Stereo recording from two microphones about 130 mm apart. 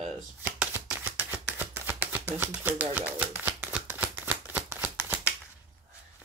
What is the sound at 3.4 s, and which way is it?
Shuffling cards, 10° right (ahead or behind).